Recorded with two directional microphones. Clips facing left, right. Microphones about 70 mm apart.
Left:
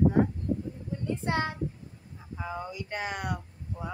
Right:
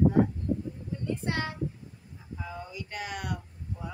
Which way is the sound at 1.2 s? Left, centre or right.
Left.